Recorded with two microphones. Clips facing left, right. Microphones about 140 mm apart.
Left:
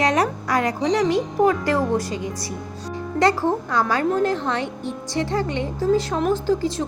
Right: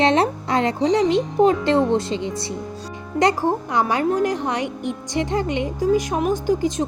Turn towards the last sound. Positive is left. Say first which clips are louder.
# right 1 dB
turn(degrees=-15)  # may be behind; listen again after turning